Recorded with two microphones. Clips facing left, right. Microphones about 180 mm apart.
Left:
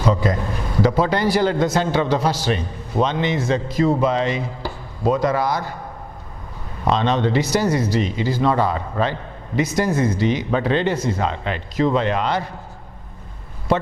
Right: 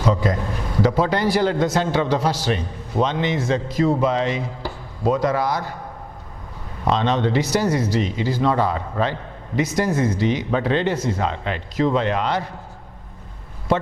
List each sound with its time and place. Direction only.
0.0 s a man's voice: 20° left (ahead or behind)
0.9 s a man's voice: 15° left (ahead or behind)
6.8 s a man's voice: 15° left (ahead or behind)